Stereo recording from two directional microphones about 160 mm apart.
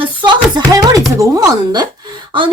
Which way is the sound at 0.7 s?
20° right (ahead or behind).